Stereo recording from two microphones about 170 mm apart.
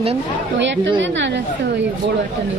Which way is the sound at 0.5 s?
90° right.